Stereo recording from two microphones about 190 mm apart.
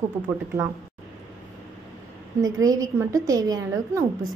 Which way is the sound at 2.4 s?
20° right (ahead or behind).